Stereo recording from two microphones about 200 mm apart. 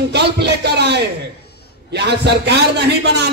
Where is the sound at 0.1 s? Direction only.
55° right (ahead or behind).